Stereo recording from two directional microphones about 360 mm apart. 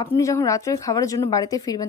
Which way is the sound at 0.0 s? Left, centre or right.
Centre.